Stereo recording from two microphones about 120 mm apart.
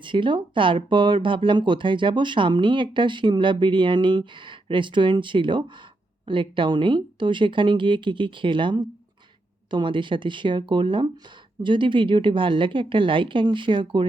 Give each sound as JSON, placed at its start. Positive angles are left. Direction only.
{"t": 0.0, "sound": "speech", "side_deg": -45}